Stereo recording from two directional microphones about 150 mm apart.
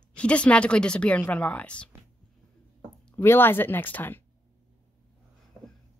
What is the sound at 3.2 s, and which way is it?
A woman's voice, 15° left (ahead or behind).